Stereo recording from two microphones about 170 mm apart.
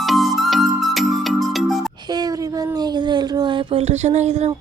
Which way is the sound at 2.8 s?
25° right (ahead or behind).